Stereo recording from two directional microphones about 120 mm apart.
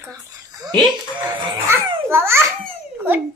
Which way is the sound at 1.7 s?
20° right (ahead or behind).